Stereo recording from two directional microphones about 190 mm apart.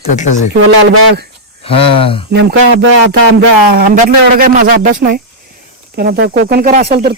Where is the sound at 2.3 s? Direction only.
60° right (ahead or behind).